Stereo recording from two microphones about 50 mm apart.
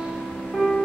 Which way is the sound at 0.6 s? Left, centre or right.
Centre.